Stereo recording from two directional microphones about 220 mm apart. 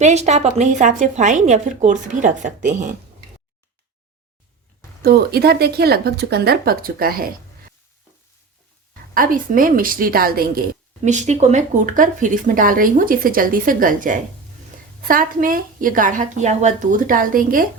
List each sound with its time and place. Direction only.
0.0 s speech: 30° right (ahead or behind)
5.0 s speech: 45° right (ahead or behind)
9.1 s speech: 40° right (ahead or behind)
11.0 s speech: 35° right (ahead or behind)